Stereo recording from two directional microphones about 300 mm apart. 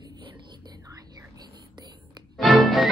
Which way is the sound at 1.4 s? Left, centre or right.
Centre.